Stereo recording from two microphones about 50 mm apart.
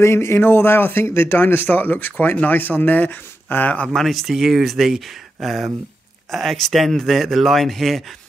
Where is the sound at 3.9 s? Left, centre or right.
Centre.